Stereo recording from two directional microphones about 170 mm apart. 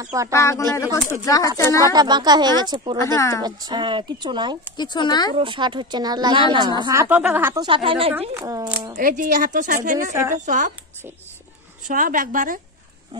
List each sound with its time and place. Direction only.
0.0 s speech: 20° right (ahead or behind)
0.3 s speech: 15° left (ahead or behind)
1.9 s speech: 25° right (ahead or behind)
3.0 s speech: 15° left (ahead or behind)
3.4 s speech: 25° right (ahead or behind)
4.7 s speech: 25° left (ahead or behind)
5.3 s a woman's voice: 30° right (ahead or behind); by 7.6 s 10° right (ahead or behind)
7.6 s a woman's voice: 30° right (ahead or behind)
8.4 s speech: 20° right (ahead or behind)
8.9 s a woman's voice: 55° right (ahead or behind)
11.9 s a woman's voice: 55° right (ahead or behind)